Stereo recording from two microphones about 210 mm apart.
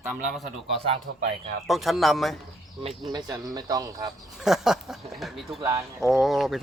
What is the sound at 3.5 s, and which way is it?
Speech, 15° right (ahead or behind).